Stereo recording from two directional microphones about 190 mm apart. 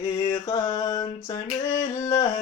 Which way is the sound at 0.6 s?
15° left (ahead or behind).